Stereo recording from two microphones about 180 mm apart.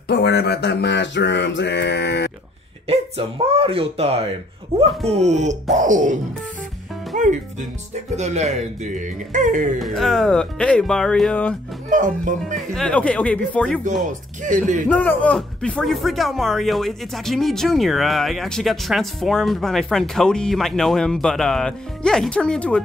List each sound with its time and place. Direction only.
0.1 s mantra: 65° left (ahead or behind)
2.9 s speech: 30° right (ahead or behind)
7.1 s music: 45° right (ahead or behind)
7.9 s speech: 40° right (ahead or behind)
9.8 s speech: centre (ahead or behind)
11.9 s speech: 45° right (ahead or behind)
12.5 s speech: 5° left (ahead or behind)
14.0 s speech: 45° right (ahead or behind)
14.9 s speech: 10° left (ahead or behind)